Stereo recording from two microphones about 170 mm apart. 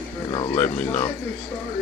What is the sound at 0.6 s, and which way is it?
Speech, 10° left (ahead or behind).